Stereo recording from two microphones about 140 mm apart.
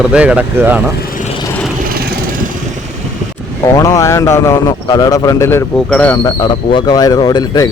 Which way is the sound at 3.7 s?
20° left (ahead or behind).